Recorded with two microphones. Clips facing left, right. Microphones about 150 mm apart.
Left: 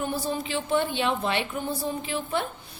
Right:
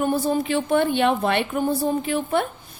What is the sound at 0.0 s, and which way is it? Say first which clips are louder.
A woman's voice: right 7 dB; 55° right (ahead or behind).